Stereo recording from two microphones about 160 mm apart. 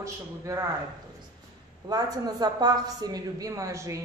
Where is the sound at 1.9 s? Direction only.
25° right (ahead or behind).